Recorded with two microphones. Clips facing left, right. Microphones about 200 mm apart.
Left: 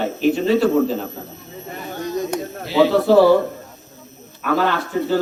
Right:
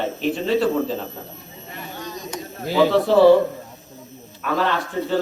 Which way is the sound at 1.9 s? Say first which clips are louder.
Left 11 dB; 55° left (ahead or behind).